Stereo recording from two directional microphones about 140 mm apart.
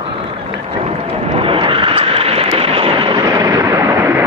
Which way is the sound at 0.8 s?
45° right (ahead or behind).